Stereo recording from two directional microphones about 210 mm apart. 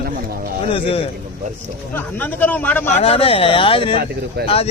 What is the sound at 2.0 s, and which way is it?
Speech, 10° left (ahead or behind).